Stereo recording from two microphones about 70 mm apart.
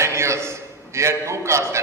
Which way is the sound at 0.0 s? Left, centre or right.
Right.